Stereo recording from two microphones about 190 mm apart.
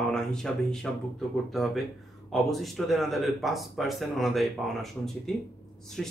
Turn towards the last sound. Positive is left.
turn(degrees=0)  # may be behind; listen again after turning